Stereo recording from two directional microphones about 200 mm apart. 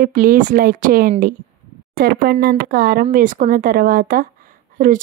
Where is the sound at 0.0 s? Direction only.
45° right (ahead or behind).